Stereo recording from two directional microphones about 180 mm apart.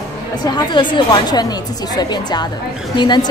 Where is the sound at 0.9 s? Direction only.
25° left (ahead or behind).